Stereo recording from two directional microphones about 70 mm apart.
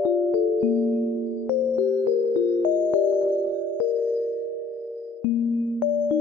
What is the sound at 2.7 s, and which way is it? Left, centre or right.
Music, left.